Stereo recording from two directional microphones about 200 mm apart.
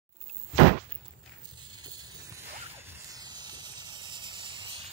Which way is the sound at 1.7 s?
20° right (ahead or behind).